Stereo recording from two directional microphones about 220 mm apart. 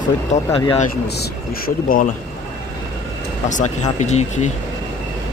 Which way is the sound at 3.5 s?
35° left (ahead or behind).